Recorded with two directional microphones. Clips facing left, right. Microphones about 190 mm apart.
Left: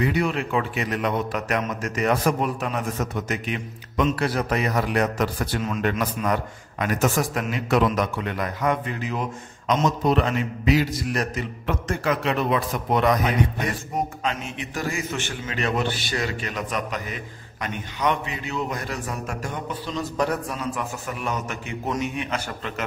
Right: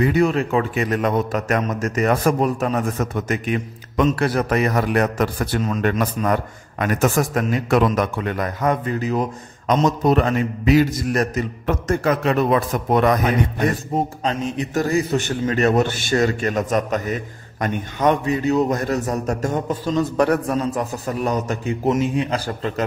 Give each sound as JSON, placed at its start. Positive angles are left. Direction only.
{"t": 0.0, "sound": "a man's voice", "side_deg": -45}
{"t": 13.9, "sound": "a man's voice", "side_deg": -35}